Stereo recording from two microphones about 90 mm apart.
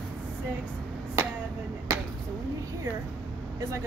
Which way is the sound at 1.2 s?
30° right (ahead or behind).